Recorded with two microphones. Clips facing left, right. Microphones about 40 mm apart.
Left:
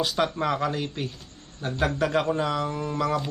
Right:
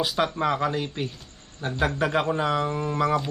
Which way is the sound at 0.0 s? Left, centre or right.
Centre.